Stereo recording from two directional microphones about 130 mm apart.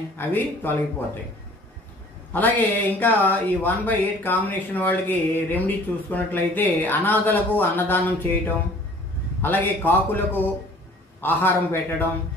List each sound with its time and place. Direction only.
0.3 s speech: 15° left (ahead or behind)
2.3 s speech: 15° left (ahead or behind)
9.4 s speech: 15° left (ahead or behind)